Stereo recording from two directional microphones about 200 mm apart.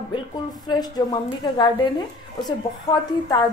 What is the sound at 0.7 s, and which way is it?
A woman's voice, 20° left (ahead or behind).